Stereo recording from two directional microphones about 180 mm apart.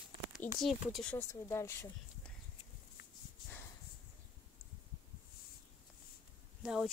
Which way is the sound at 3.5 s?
15° left (ahead or behind).